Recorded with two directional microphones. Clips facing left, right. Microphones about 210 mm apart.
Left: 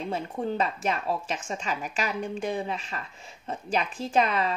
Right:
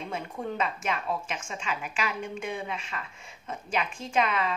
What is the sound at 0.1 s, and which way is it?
A woman's voice, 35° left (ahead or behind).